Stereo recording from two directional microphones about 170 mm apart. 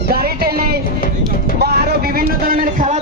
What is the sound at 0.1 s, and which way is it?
Music, 65° right (ahead or behind).